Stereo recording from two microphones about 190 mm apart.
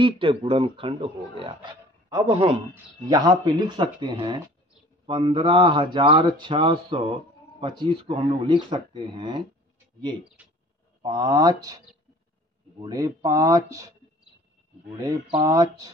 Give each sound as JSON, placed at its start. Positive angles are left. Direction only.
{"t": 0.0, "sound": "speech", "side_deg": -25}
{"t": 2.2, "sound": "a man's voice", "side_deg": -35}
{"t": 2.7, "sound": "speech", "side_deg": -20}
{"t": 11.0, "sound": "speech", "side_deg": -20}
{"t": 14.9, "sound": "speech", "side_deg": -15}